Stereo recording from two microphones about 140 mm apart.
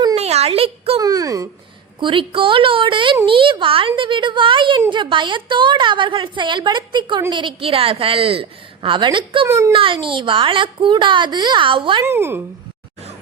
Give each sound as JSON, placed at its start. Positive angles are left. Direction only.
{"t": 0.2, "sound": "a sound", "side_deg": -50}
{"t": 0.9, "sound": "a sound", "side_deg": -25}
{"t": 2.0, "sound": "a woman's voice", "side_deg": -35}
{"t": 9.5, "sound": "a child's voice", "side_deg": -20}
{"t": 9.7, "sound": "a woman's voice", "side_deg": -40}
{"t": 12.0, "sound": "speech", "side_deg": -15}